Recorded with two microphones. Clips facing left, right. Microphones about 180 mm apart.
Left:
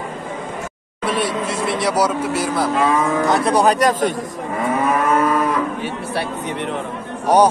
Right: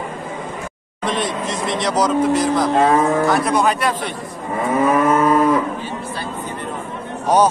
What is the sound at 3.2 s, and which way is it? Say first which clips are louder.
Cattle: even; 20° left (ahead or behind).